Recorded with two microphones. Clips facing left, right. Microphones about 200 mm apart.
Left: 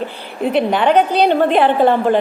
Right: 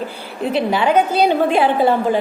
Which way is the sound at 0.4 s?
Centre (ahead or behind).